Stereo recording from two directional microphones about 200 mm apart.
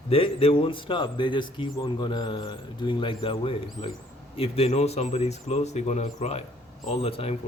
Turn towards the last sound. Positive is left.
turn(degrees=30)  # may be behind; listen again after turning